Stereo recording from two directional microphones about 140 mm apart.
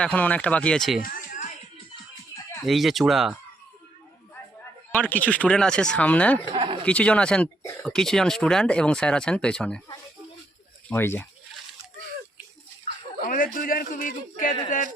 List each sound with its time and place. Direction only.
0.0 s speech: 10° left (ahead or behind)
2.6 s speech: centre (ahead or behind)
4.9 s speech: 10° left (ahead or behind)
6.5 s a sound: 35° right (ahead or behind)
6.8 s speech: 10° left (ahead or behind)
10.8 s speech: 15° left (ahead or behind)
13.2 s a sound: 80° left
13.6 s a man's voice: 85° left; by 14.8 s 70° left (ahead or behind)